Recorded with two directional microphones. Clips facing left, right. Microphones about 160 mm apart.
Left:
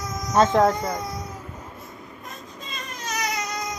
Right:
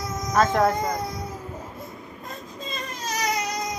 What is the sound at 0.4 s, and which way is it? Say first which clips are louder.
Speech: left 2 dB; 25° left (ahead or behind).